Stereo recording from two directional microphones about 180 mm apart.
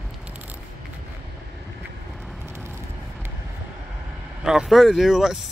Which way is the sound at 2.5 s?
15° right (ahead or behind).